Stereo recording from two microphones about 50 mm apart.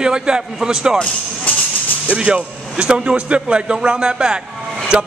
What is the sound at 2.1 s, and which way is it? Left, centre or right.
Speech, right.